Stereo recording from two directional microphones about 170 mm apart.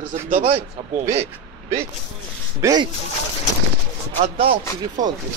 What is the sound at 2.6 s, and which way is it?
Speech, 25° right (ahead or behind).